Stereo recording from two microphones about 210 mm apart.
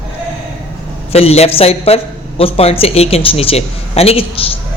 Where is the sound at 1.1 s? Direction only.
30° left (ahead or behind).